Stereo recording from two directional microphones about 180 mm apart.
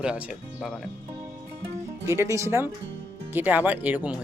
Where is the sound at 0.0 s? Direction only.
5° right (ahead or behind).